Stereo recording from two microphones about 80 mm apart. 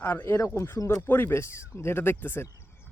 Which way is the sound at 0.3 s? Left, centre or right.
Left.